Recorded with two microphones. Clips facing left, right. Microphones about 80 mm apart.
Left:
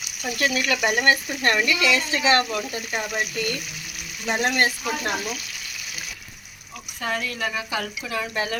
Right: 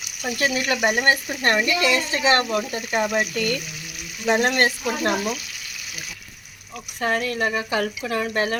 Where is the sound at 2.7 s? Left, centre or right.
Right.